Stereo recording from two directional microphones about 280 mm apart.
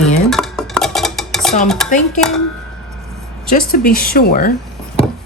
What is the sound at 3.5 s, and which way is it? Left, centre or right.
A woman's voice, left.